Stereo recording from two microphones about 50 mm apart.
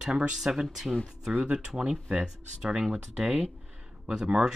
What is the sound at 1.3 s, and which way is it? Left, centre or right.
Speech, right.